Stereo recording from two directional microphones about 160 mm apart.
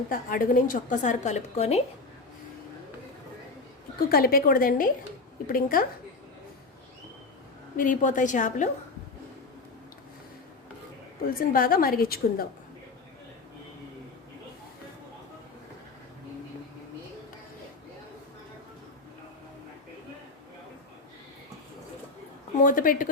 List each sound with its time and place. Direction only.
0.1 s a woman's voice: 60° left (ahead or behind); by 1.8 s 40° left (ahead or behind)
4.1 s a woman's voice: 70° left (ahead or behind)
7.8 s a woman's voice: 55° left (ahead or behind)
11.3 s a woman's voice: 65° left (ahead or behind)
22.6 s a woman's voice: 60° left (ahead or behind)